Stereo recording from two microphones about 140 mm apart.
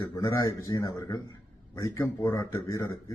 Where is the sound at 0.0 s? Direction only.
25° left (ahead or behind).